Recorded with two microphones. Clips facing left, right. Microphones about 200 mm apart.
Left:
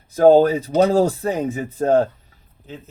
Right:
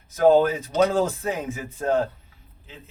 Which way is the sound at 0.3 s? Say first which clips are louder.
Left 5 dB; 35° left (ahead or behind).